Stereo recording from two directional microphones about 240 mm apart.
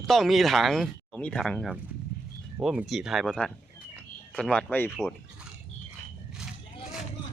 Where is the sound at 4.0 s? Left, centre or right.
Centre.